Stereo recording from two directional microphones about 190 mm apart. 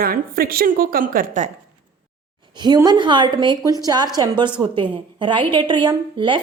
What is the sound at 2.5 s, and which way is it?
A woman's voice, 20° right (ahead or behind).